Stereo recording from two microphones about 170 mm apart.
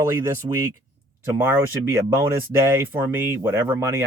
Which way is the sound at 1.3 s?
15° right (ahead or behind).